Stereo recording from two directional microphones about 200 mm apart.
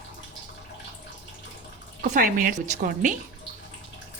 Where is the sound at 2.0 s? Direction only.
40° right (ahead or behind).